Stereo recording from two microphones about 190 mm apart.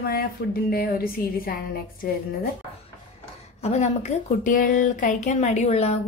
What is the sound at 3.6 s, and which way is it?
Speech, 35° left (ahead or behind).